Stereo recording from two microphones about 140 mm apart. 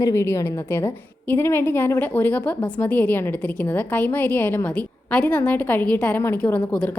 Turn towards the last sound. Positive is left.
turn(degrees=10)  # may be behind; listen again after turning